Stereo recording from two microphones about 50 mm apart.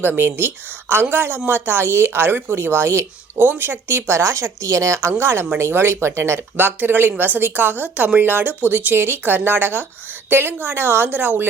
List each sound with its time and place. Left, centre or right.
0.0 s speech: right
3.3 s speech: right
4.2 s a woman's voice: right
4.9 s speech: right
6.6 s speech: right